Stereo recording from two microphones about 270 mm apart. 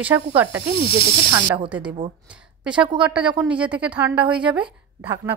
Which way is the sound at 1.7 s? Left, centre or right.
Centre.